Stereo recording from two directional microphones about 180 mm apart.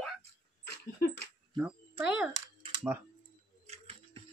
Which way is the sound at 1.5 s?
5° right (ahead or behind).